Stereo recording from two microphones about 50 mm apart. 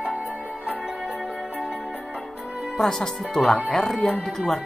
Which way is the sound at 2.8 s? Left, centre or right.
Centre.